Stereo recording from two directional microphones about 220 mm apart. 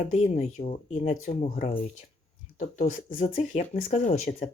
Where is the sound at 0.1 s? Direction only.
30° left (ahead or behind).